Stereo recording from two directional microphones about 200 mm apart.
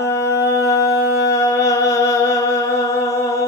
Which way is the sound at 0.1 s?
15° left (ahead or behind).